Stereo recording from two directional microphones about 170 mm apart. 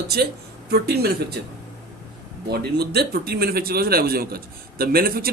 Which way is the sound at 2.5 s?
70° right (ahead or behind).